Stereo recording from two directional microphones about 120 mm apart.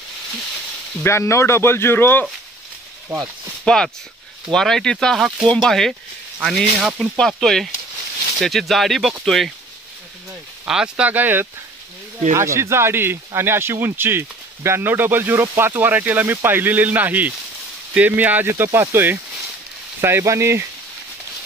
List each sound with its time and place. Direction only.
1.0 s speech: 25° left (ahead or behind)
3.1 s speech: 30° right (ahead or behind)
3.6 s speech: 5° left (ahead or behind)
7.2 s speech: 5° left (ahead or behind)
10.7 s speech: 10° right (ahead or behind)